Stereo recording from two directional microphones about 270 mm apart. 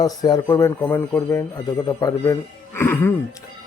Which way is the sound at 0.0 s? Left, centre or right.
Centre.